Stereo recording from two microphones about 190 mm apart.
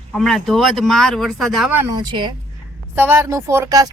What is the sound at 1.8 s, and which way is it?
Speech, 20° right (ahead or behind).